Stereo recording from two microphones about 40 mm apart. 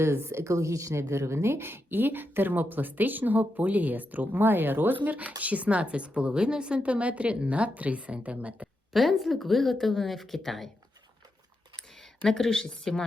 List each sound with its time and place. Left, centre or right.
0.1 s speech: right
1.5 s speech: right
8.9 s a woman's voice: centre
12.2 s a woman's voice: centre